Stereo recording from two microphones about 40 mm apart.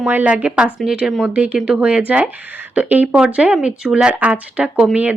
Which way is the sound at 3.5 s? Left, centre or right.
Right.